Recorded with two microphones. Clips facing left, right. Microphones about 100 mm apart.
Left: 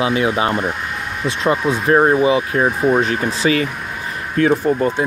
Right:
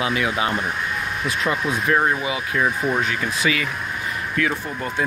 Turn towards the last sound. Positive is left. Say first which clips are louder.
# left 11 dB
turn(degrees=40)  # may be behind; listen again after turning